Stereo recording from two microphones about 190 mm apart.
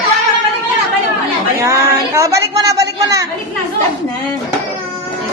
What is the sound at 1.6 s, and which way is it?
A woman's voice, 15° right (ahead or behind).